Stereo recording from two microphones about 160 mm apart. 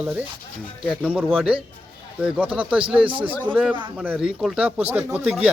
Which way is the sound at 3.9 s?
10° right (ahead or behind).